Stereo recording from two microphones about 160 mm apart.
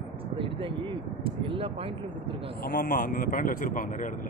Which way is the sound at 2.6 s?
85° left.